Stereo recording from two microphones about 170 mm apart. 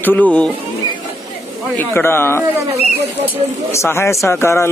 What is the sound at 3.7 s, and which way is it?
A man's voice, 15° left (ahead or behind).